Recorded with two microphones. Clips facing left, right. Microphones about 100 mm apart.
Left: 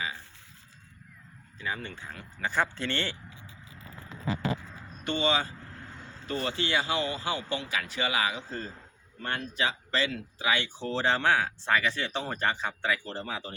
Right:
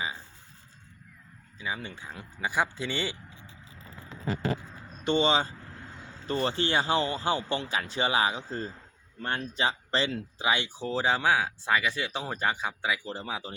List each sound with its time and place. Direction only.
1.5 s speech: 10° right (ahead or behind)
5.0 s speech: 25° right (ahead or behind)